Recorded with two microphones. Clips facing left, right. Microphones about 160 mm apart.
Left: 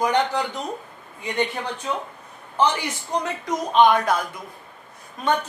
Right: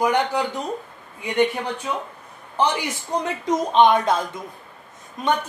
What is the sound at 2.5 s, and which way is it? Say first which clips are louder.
Speech: even; 15° right (ahead or behind).